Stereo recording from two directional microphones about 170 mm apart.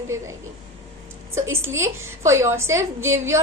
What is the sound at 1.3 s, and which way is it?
A woman's voice, 15° right (ahead or behind).